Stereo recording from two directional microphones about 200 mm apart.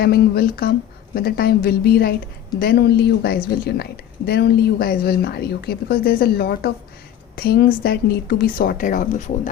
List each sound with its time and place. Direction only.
0.0 s a woman's voice: 50° left (ahead or behind)